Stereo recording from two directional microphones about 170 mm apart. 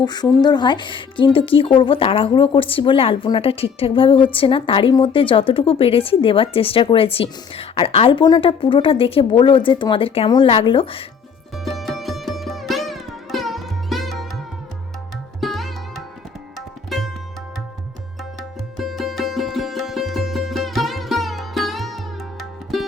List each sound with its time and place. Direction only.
0.0 s a woman's voice: 25° left (ahead or behind)
11.5 s sitar: centre (ahead or behind)
16.6 s tabla: centre (ahead or behind)
18.8 s music: centre (ahead or behind)